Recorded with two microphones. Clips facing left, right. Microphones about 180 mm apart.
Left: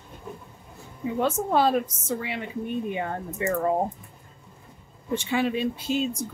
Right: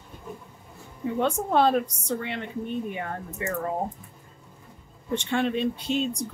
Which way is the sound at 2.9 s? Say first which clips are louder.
Left 3 dB; 20° left (ahead or behind).